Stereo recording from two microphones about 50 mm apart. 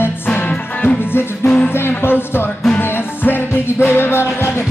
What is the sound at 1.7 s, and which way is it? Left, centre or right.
Music, left.